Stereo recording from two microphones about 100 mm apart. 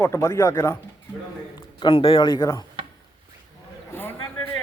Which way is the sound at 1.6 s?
50° left (ahead or behind).